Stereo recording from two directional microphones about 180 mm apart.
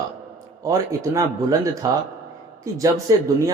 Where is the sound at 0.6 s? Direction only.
15° right (ahead or behind).